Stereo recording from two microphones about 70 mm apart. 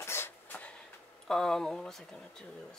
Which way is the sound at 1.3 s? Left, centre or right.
Centre.